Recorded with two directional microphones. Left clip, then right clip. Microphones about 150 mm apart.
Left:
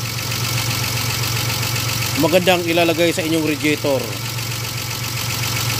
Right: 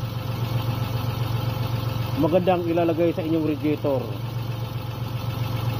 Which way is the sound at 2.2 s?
45° left (ahead or behind).